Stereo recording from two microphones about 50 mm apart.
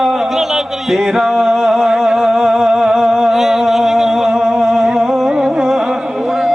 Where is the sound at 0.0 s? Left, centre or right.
Centre.